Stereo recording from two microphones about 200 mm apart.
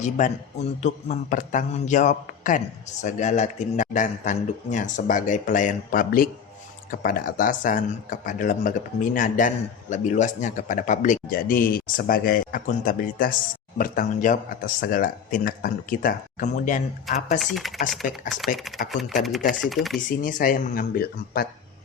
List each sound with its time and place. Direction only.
0.0 s speech: 35° left (ahead or behind)
17.4 s speech: centre (ahead or behind)
20.1 s speech: 40° left (ahead or behind)